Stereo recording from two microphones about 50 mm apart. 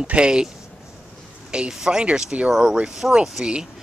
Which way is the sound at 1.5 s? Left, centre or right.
Centre.